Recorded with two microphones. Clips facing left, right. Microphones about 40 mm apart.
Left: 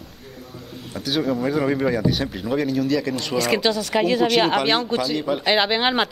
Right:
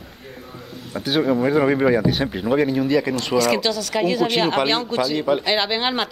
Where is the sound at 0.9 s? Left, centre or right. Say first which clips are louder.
Right 3 dB; centre.